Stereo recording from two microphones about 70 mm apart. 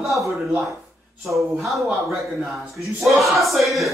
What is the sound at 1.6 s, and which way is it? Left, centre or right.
Speech, centre.